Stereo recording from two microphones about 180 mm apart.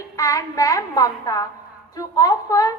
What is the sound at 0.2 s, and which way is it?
A woman's voice, 20° left (ahead or behind).